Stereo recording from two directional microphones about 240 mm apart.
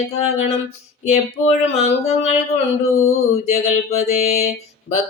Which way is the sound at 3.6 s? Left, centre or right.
Left.